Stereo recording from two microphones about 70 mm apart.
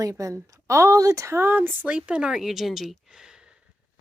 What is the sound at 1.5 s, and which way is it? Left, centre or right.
Speech, right.